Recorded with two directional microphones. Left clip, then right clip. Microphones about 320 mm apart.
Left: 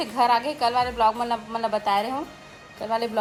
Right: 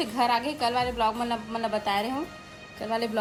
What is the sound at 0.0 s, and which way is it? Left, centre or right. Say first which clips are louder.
Speech: left 4 dB; centre.